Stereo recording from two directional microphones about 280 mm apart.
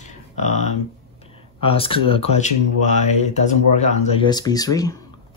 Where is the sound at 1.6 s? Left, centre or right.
Centre.